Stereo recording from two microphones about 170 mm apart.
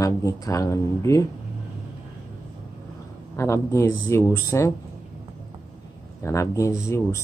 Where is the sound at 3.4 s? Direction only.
15° left (ahead or behind).